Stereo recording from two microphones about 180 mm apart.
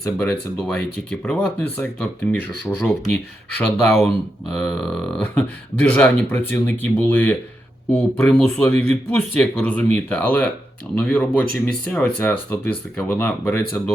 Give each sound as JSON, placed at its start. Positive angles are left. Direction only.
{"t": 0.0, "sound": "speech", "side_deg": 10}
{"t": 3.8, "sound": "burping", "side_deg": 0}
{"t": 5.2, "sound": "speech", "side_deg": 5}